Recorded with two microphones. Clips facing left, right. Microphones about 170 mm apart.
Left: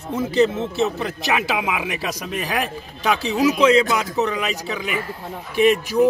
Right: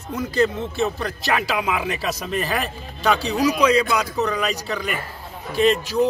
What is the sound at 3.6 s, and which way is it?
Speech, 20° left (ahead or behind).